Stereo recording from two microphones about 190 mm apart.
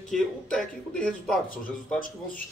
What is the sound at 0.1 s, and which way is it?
Speech, 5° left (ahead or behind).